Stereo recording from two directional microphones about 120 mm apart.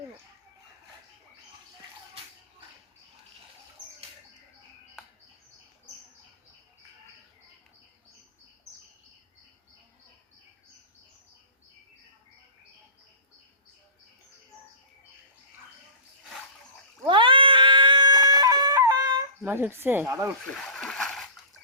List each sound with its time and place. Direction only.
17.1 s cat: 45° right (ahead or behind)
19.4 s speech: 20° right (ahead or behind)
20.5 s splash: 5° left (ahead or behind)